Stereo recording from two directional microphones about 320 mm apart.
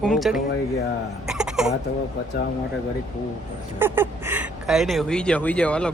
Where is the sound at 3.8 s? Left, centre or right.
Centre.